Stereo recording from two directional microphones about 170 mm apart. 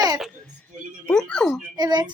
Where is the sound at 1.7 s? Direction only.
25° right (ahead or behind).